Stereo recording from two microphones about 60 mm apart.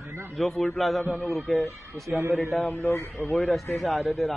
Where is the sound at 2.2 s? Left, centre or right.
Right.